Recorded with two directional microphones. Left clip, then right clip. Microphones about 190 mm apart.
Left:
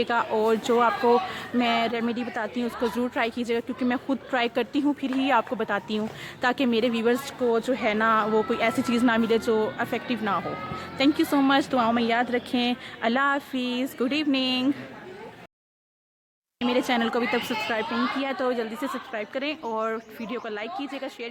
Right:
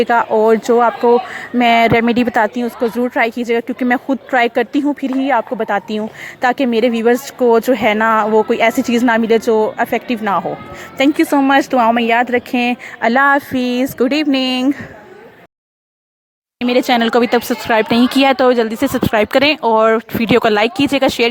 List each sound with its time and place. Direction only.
0.0 s speech: 30° right (ahead or behind)
1.5 s a woman's voice: 35° right (ahead or behind)
2.6 s speech: 25° right (ahead or behind)
7.4 s a woman's voice: 40° right (ahead or behind)
16.6 s speech: 40° right (ahead or behind)